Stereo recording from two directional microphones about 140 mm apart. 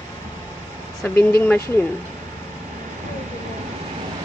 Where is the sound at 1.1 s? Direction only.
15° left (ahead or behind).